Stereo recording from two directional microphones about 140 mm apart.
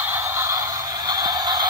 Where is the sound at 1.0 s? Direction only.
30° right (ahead or behind).